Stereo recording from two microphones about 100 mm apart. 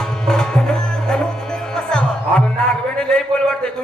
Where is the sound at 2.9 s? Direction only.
5° left (ahead or behind).